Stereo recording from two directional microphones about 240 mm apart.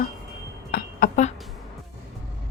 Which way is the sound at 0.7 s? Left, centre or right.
Left.